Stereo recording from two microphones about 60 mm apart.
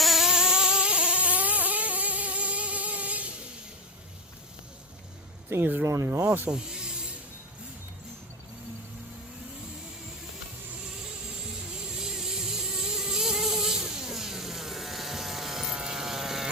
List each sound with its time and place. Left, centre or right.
0.0 s vehicle: centre; by 3.3 s right
5.5 s speech: right
5.8 s speech: right
6.5 s snake: centre
11.9 s vehicle: centre
15.7 s sheep: centre